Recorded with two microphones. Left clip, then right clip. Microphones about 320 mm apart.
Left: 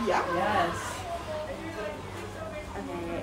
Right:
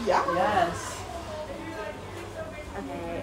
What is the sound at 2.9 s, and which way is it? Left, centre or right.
Speech, centre.